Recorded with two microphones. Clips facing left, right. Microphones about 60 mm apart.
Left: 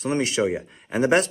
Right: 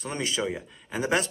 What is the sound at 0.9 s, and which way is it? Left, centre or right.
Speech, left.